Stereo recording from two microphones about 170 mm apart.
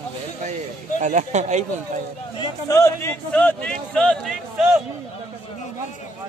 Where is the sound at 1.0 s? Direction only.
45° right (ahead or behind).